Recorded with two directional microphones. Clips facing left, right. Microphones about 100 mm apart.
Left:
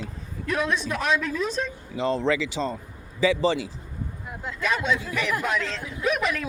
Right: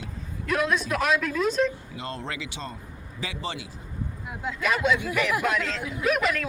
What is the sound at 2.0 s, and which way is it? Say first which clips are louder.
Speech: left 12 dB; 90° left.